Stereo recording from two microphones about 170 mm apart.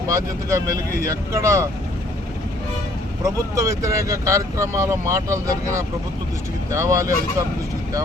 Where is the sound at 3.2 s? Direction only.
20° right (ahead or behind).